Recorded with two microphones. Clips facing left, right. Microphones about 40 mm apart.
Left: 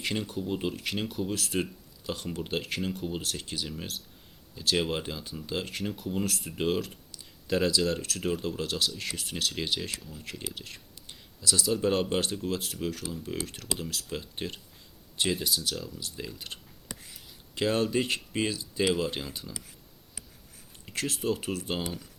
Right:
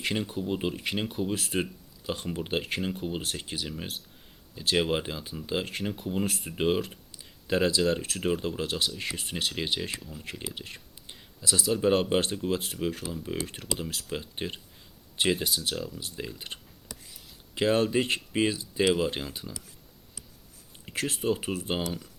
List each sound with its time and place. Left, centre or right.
0.0 s speech: centre
16.9 s whispering: centre
17.5 s speech: centre
21.1 s speech: centre